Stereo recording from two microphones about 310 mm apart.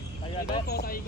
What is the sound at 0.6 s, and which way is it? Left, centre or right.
Speech, left.